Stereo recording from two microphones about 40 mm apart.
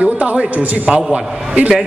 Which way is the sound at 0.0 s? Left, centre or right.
Right.